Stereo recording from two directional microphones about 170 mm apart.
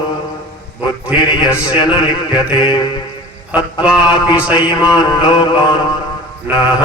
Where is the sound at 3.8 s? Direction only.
5° right (ahead or behind).